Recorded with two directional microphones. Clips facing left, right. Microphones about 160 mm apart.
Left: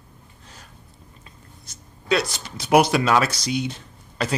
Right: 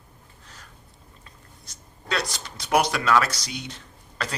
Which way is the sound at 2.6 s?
20° left (ahead or behind).